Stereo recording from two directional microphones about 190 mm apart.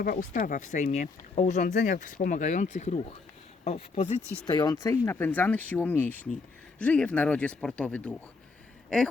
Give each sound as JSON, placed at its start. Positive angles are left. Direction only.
{"t": 0.0, "sound": "speech", "side_deg": 45}
{"t": 4.4, "sound": "speech", "side_deg": 20}